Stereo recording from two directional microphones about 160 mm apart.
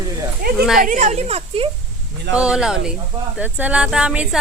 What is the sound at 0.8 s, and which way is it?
Speech, 55° right (ahead or behind).